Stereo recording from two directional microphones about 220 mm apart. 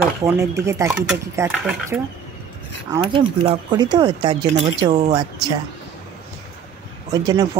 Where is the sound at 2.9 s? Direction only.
20° right (ahead or behind).